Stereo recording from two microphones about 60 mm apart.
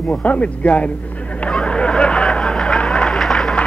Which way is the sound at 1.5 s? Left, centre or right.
Centre.